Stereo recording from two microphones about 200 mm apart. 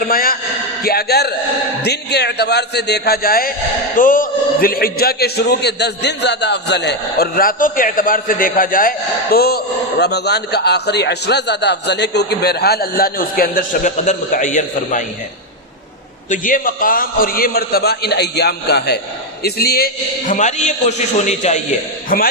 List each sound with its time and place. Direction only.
0.0 s a sound: 45° left (ahead or behind)
0.8 s a man's voice: 50° left (ahead or behind)
16.3 s a man's voice: 40° left (ahead or behind)